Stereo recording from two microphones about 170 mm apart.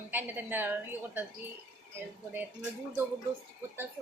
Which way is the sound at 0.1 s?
10° right (ahead or behind).